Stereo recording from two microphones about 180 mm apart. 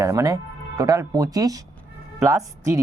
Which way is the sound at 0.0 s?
20° right (ahead or behind).